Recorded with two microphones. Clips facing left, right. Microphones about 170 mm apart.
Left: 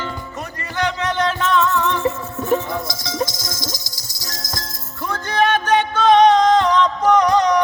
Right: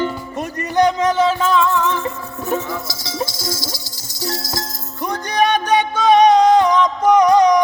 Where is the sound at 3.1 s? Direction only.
10° right (ahead or behind).